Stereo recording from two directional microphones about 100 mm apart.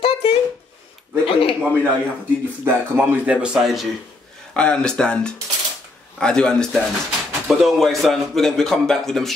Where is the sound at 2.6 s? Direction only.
20° right (ahead or behind).